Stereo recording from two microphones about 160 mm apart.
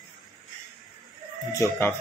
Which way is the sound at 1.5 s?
15° left (ahead or behind).